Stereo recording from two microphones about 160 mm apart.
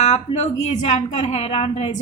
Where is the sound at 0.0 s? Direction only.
45° left (ahead or behind).